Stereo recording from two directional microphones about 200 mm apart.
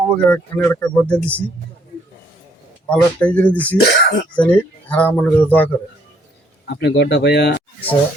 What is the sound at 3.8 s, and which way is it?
Speech, 55° left (ahead or behind).